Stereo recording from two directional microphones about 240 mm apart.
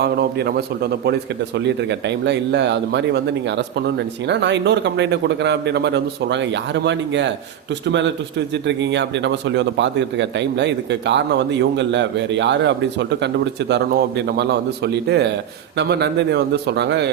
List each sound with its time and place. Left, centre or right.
0.0 s a man's voice: right
8.6 s a man's voice: right